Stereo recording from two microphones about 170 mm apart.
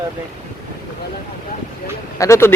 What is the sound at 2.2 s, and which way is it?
Speech, 15° left (ahead or behind).